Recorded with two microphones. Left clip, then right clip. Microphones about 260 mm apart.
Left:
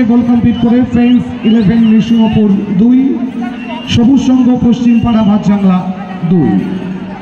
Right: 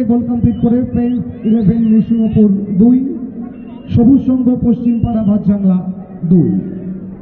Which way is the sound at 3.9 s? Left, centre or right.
Left.